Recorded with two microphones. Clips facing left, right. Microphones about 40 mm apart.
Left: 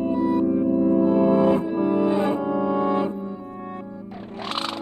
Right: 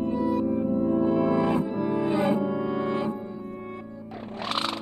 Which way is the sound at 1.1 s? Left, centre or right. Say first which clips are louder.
Left 5 dB; left.